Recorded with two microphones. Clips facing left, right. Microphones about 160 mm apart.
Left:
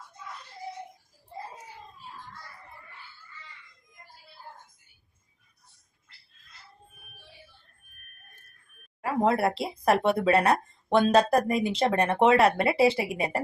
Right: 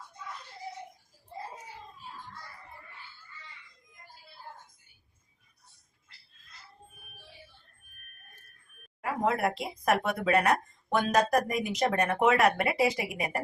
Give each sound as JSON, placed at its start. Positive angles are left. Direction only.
{"t": 9.0, "sound": "speech", "side_deg": 30}